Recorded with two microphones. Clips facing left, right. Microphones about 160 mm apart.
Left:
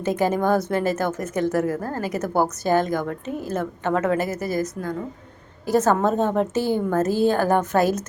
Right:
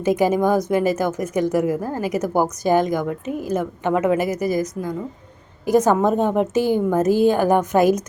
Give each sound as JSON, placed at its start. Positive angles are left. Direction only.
{"t": 0.0, "sound": "speech", "side_deg": -15}